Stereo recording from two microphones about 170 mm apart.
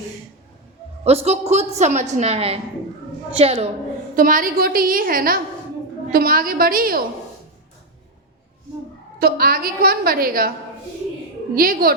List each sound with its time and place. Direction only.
1.0 s a woman's voice: 40° right (ahead or behind)
4.1 s a woman's voice: 55° right (ahead or behind)
9.1 s a woman's voice: 65° right (ahead or behind)
11.5 s a woman's voice: 60° right (ahead or behind)